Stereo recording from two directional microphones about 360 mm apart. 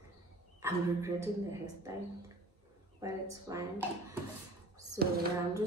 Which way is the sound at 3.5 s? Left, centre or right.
Centre.